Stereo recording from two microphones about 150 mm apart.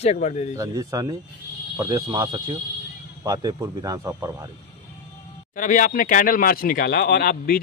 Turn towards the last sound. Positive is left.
turn(degrees=80)